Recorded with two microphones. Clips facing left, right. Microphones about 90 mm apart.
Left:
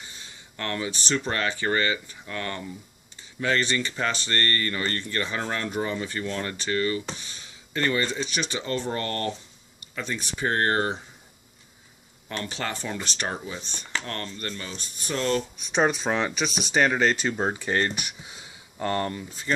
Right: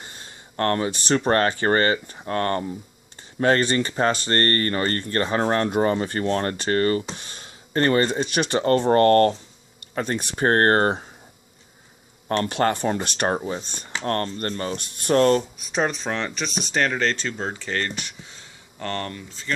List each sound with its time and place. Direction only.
0.0 s speech: 45° right (ahead or behind)
12.3 s speech: 50° right (ahead or behind)
14.8 s speech: 65° right (ahead or behind)
15.5 s speech: centre (ahead or behind); by 19.5 s 15° left (ahead or behind)